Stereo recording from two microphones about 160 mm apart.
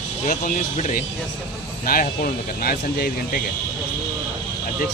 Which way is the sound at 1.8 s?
65° left (ahead or behind).